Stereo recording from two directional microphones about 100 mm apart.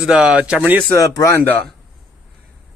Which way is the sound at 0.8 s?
35° left (ahead or behind).